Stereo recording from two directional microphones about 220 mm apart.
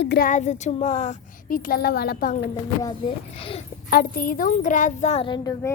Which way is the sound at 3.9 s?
40° left (ahead or behind).